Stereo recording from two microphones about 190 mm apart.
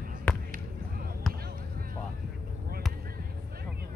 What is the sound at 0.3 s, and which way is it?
Basketball bounce, 5° left (ahead or behind).